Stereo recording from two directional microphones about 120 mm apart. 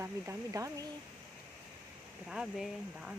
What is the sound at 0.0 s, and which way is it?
Speech, 25° right (ahead or behind).